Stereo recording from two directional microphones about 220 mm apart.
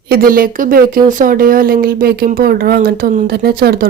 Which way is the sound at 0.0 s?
45° right (ahead or behind).